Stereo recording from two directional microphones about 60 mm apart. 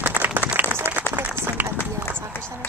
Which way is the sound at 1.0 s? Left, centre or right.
Left.